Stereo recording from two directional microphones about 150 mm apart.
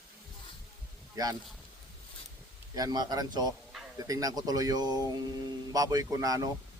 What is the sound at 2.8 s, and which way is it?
A man's voice, 25° right (ahead or behind).